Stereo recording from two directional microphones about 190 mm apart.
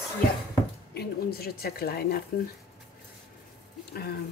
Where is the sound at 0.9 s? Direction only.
55° left (ahead or behind).